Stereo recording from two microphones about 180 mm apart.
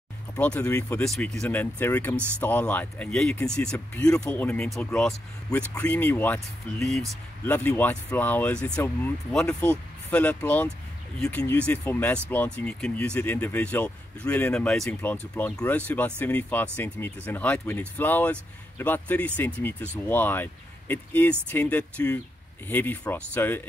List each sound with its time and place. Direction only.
0.4 s speech: 10° left (ahead or behind)